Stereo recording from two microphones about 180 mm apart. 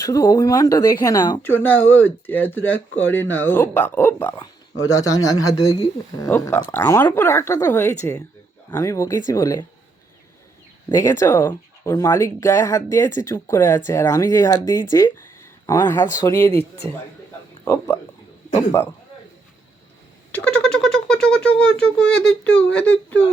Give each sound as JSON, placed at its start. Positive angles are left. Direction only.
{"t": 0.0, "sound": "speech", "side_deg": 20}
{"t": 10.8, "sound": "speech", "side_deg": 20}
{"t": 17.7, "sound": "speech", "side_deg": 15}
{"t": 20.3, "sound": "a sound", "side_deg": 5}